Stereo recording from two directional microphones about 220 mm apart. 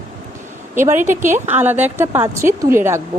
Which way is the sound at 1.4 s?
10° right (ahead or behind).